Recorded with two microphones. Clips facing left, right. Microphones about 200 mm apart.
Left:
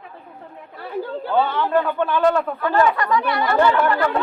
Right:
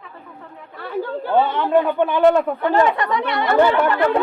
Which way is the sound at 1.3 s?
20° right (ahead or behind).